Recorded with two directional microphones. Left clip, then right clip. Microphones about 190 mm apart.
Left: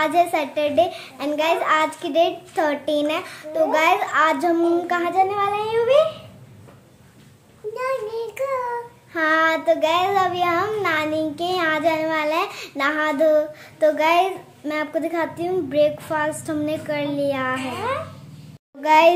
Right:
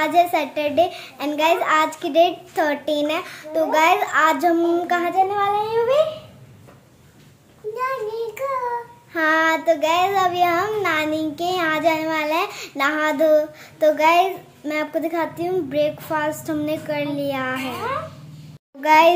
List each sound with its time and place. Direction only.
0.0 s a woman's voice: 5° right (ahead or behind)
7.7 s child singing: 20° left (ahead or behind)
9.1 s child singing: 5° right (ahead or behind)
18.8 s child singing: centre (ahead or behind)